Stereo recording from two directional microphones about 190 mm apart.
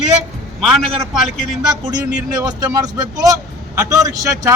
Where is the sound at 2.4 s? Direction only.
20° right (ahead or behind).